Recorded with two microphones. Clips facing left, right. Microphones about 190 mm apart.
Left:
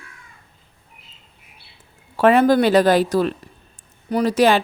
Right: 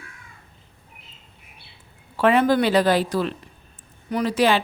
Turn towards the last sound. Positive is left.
turn(degrees=45)  # may be behind; listen again after turning